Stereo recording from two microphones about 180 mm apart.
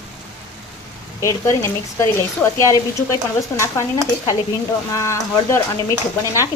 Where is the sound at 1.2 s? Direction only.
15° left (ahead or behind).